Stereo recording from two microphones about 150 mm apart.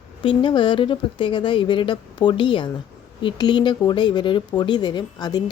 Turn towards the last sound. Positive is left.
turn(degrees=25)  # may be behind; listen again after turning